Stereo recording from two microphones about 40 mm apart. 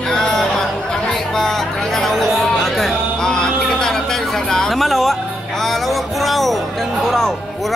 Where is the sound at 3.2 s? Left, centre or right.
Centre.